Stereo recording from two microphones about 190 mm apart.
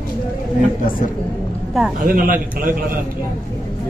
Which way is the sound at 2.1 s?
45° right (ahead or behind).